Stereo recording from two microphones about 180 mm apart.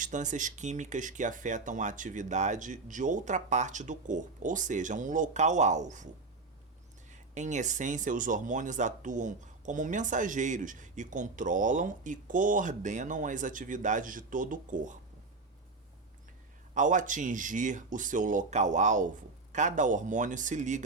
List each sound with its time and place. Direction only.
0.0 s speech: 40° right (ahead or behind)
7.1 s speech: 40° right (ahead or behind)
16.7 s speech: 45° right (ahead or behind)